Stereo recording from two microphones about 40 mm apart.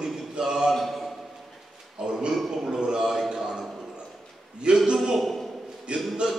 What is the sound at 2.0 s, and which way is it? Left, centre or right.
A man's voice, right.